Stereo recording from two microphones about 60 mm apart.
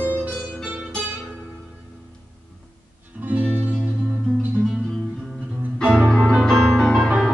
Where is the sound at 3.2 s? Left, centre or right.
Right.